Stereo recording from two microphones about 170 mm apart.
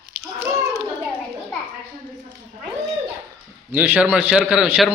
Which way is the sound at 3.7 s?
10° right (ahead or behind).